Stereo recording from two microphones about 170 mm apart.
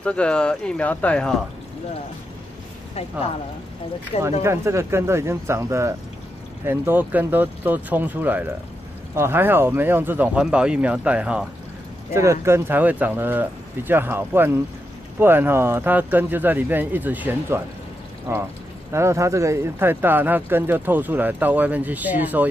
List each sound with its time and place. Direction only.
0.0 s speech: 5° left (ahead or behind)
4.2 s speech: 15° right (ahead or behind)